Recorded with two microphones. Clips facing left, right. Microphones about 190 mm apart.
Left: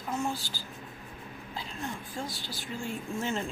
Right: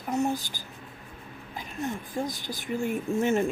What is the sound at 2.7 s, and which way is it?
Speech, 60° right (ahead or behind).